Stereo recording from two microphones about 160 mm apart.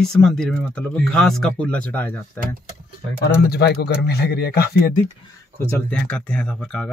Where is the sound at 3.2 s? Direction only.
90° left.